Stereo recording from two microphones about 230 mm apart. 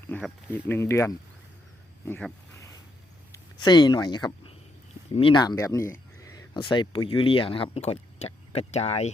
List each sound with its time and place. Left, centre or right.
0.1 s speech: centre
3.3 s speech: centre